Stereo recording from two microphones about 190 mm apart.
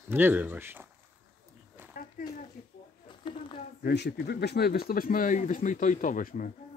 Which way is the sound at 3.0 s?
25° left (ahead or behind).